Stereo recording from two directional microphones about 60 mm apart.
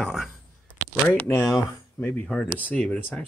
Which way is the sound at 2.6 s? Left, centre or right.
Left.